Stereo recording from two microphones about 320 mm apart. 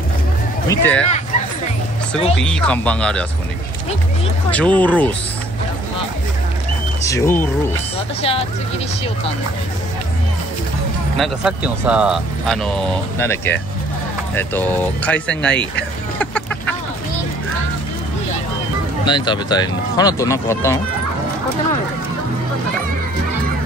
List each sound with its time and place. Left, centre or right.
0.7 s speech: centre
2.3 s speech: centre
4.5 s speech: centre
7.1 s speech: centre
11.1 s speech: centre
16.2 s a sound: centre
19.0 s speech: centre